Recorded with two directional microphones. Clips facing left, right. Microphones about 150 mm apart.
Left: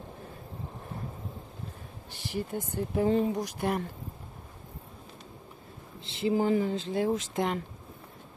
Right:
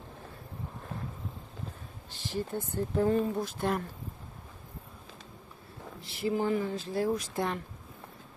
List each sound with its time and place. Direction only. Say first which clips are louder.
2.0 s speech: even; 15° left (ahead or behind)
5.9 s speech: left 3 dB; 25° left (ahead or behind)